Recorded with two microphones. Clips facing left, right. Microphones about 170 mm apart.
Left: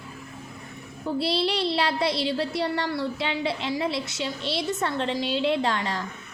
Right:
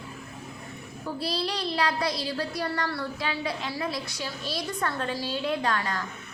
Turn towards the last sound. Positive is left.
turn(degrees=25)  # may be behind; listen again after turning